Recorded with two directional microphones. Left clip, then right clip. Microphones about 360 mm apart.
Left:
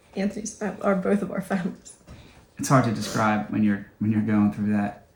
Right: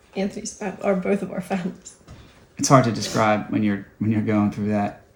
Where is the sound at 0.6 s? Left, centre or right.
Right.